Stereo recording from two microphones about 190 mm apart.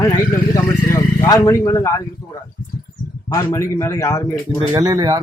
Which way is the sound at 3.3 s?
15° left (ahead or behind).